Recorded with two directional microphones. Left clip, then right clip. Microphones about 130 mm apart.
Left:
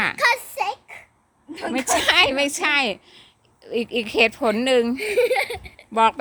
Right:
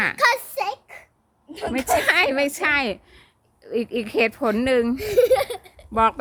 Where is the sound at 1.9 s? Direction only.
20° right (ahead or behind).